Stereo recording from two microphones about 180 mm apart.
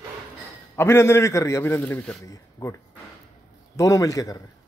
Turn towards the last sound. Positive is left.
turn(degrees=20)  # may be behind; listen again after turning